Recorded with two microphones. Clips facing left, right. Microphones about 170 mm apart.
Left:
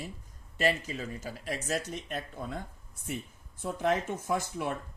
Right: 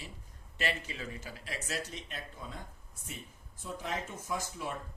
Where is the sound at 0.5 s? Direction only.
40° left (ahead or behind).